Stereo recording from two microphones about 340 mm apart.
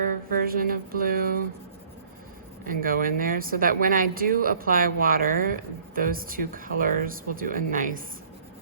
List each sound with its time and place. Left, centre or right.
0.3 s speech: right
2.6 s speech: right